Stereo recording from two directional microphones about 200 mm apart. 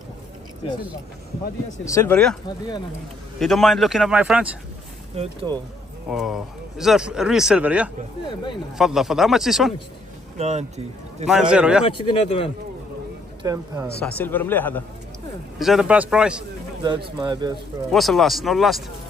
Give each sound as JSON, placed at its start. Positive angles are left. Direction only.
{"t": 1.9, "sound": "speech", "side_deg": 15}
{"t": 3.3, "sound": "speech", "side_deg": 0}
{"t": 5.1, "sound": "speech", "side_deg": -30}
{"t": 6.0, "sound": "speech", "side_deg": 0}
{"t": 10.3, "sound": "speech", "side_deg": -35}
{"t": 11.2, "sound": "speech", "side_deg": -5}
{"t": 11.8, "sound": "speech", "side_deg": 25}
{"t": 13.4, "sound": "speech", "side_deg": -20}
{"t": 14.0, "sound": "speech", "side_deg": 10}
{"t": 15.6, "sound": "speech", "side_deg": -5}
{"t": 16.8, "sound": "speech", "side_deg": -25}
{"t": 17.9, "sound": "speech", "side_deg": 0}